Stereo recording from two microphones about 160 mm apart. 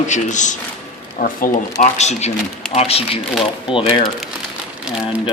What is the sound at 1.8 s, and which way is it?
A man's voice, 45° left (ahead or behind).